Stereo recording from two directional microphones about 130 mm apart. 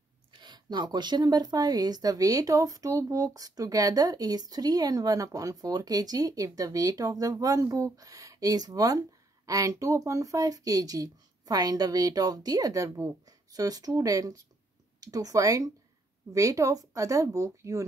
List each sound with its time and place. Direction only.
0.3 s speech: 35° right (ahead or behind)